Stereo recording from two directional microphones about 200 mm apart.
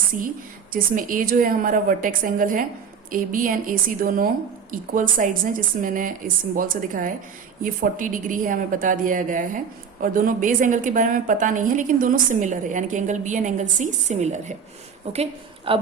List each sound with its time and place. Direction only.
0.7 s a woman's voice: 40° right (ahead or behind)